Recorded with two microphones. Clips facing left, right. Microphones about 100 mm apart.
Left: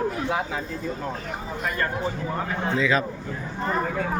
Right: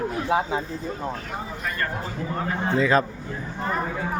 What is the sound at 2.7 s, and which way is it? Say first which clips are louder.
Speech: right 3 dB; 40° right (ahead or behind).